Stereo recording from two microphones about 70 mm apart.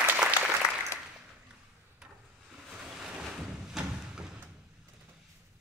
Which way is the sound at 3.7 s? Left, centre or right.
Centre.